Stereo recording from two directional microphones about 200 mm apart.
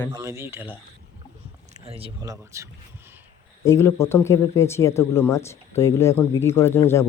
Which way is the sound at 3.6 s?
15° left (ahead or behind).